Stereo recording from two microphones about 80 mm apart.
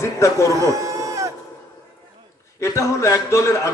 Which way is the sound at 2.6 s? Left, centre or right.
Left.